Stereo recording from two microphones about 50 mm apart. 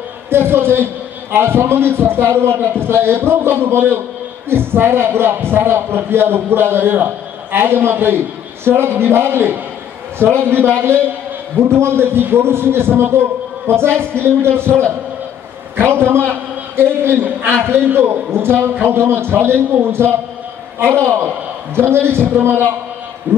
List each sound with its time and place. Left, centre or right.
0.3 s a man's voice: right